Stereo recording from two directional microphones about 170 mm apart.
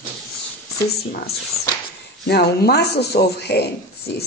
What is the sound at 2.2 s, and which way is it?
A man's voice, 70° left (ahead or behind).